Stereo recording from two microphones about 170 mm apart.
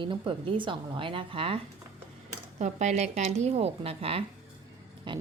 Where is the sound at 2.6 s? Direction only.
45° right (ahead or behind).